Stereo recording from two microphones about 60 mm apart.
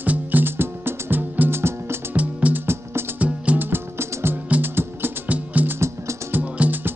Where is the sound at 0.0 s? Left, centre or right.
Right.